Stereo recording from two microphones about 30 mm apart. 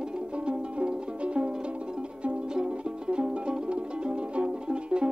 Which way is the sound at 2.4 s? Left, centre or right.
Right.